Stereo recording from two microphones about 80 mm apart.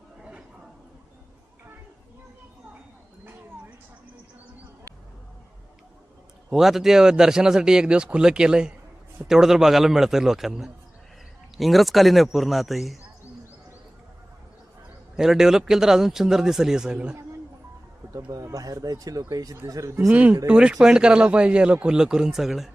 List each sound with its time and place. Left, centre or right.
6.5 s a man's voice: centre
15.1 s speech: centre
18.3 s speech: right
20.1 s speech: centre